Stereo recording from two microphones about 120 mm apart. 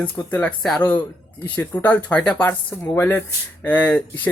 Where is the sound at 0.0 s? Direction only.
15° left (ahead or behind).